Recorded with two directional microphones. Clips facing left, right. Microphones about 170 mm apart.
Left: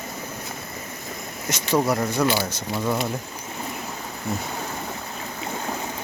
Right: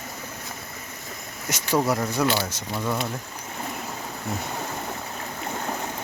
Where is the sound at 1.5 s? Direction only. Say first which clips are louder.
Left 1 dB; 10° right (ahead or behind).